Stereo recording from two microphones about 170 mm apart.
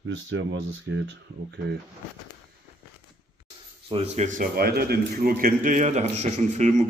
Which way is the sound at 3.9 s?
40° right (ahead or behind).